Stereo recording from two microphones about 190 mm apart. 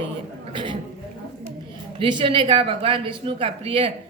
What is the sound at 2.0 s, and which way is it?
Speech, 25° right (ahead or behind).